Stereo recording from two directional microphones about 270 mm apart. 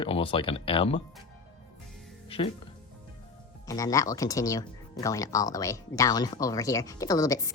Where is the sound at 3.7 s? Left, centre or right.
Centre.